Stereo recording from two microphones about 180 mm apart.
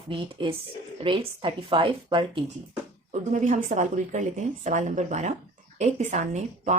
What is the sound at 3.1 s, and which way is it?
Speech, 40° right (ahead or behind).